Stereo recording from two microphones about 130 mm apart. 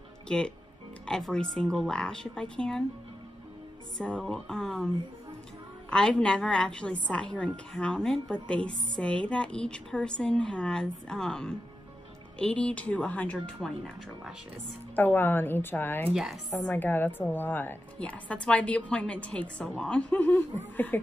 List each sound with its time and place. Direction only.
0.3 s a woman's voice: 5° left (ahead or behind)
4.0 s speech: 5° left (ahead or behind)
5.9 s a woman's voice: 5° left (ahead or behind)
15.0 s a woman's voice: 15° left (ahead or behind)
16.1 s speech: centre (ahead or behind)
16.6 s a woman's voice: 15° left (ahead or behind)